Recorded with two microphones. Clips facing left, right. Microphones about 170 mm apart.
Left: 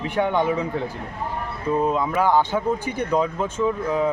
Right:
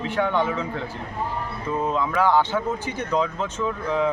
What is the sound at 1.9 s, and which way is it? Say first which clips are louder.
A man's voice: right 2 dB; 10° left (ahead or behind).